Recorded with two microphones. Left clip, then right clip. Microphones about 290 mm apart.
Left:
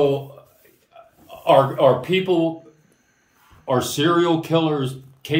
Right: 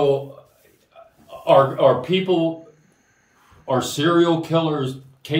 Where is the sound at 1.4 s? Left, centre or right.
Centre.